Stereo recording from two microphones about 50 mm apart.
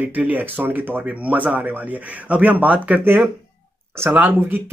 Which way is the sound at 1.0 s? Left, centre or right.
Right.